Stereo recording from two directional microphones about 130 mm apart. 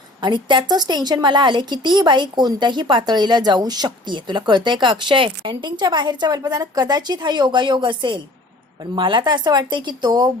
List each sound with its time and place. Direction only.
0.2 s a woman's voice: 35° right (ahead or behind)